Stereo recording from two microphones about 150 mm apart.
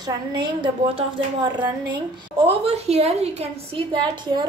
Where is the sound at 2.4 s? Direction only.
45° right (ahead or behind).